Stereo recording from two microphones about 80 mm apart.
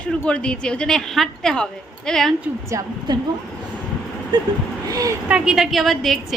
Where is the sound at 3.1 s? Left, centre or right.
Right.